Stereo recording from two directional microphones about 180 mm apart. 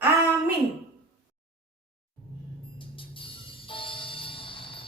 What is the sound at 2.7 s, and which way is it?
Music, 30° left (ahead or behind).